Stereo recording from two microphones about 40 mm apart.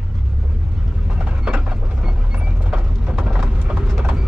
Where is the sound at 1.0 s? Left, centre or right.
Right.